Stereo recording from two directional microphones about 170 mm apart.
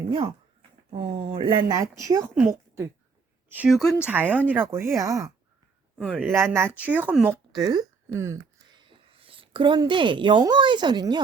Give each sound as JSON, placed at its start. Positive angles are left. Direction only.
{"t": 0.1, "sound": "a woman's voice", "side_deg": -30}
{"t": 7.6, "sound": "speech", "side_deg": -25}
{"t": 8.9, "sound": "a woman's voice", "side_deg": -30}